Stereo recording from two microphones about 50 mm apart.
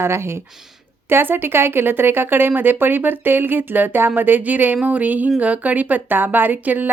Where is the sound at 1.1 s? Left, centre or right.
Right.